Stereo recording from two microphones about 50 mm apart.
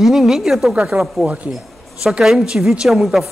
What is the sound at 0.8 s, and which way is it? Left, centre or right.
A woman's voice, right.